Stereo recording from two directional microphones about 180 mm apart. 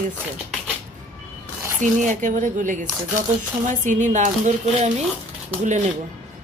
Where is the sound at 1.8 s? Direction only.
45° right (ahead or behind).